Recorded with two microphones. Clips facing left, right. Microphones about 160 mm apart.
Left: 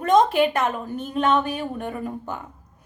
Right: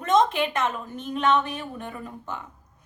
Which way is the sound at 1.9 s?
45° left (ahead or behind).